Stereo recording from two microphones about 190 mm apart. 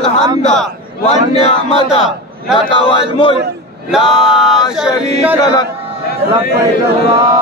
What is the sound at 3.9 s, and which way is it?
Speech, 5° right (ahead or behind).